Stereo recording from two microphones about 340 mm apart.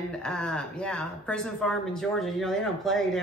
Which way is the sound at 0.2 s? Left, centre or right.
Centre.